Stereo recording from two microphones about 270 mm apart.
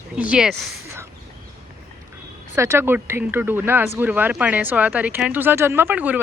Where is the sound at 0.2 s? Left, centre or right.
Centre.